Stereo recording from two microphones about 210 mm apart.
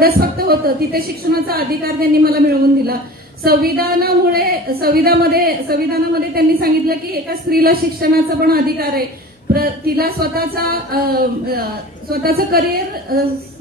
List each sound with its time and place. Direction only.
0.0 s a woman's voice: 45° right (ahead or behind)